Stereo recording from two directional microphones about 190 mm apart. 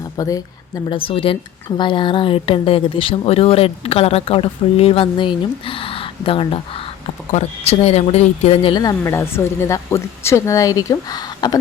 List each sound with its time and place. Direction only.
0.2 s speech: 20° left (ahead or behind)